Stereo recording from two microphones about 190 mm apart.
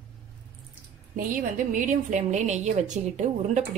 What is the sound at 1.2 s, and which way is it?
A woman's voice, 45° right (ahead or behind).